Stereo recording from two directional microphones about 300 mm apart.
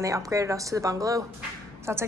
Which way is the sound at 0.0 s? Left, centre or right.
Centre.